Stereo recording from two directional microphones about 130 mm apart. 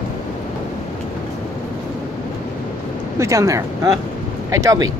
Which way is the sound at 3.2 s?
25° right (ahead or behind).